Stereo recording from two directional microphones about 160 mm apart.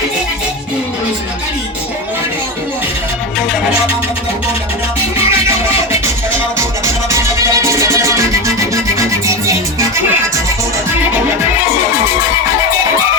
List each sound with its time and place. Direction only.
5.5 s music: 15° right (ahead or behind)